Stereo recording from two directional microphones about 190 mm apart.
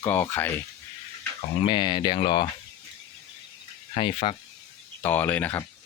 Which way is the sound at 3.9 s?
30° left (ahead or behind).